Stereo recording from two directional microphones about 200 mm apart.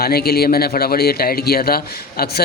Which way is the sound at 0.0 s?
50° left (ahead or behind).